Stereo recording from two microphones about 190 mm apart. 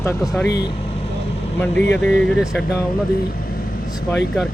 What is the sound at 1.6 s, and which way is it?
Speech, 5° left (ahead or behind).